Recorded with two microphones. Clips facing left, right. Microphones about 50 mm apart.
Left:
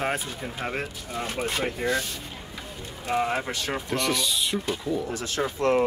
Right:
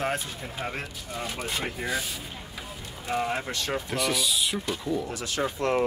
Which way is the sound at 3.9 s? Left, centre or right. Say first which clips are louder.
Left 2 dB; centre.